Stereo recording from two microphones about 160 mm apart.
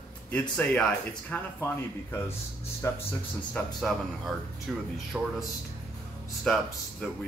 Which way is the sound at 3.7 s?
Centre (ahead or behind).